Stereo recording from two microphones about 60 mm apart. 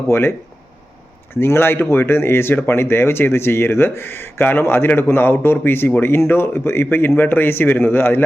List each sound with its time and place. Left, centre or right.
0.1 s speech: left
1.4 s speech: left